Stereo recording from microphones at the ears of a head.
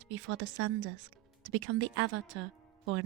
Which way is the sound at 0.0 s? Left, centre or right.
Right.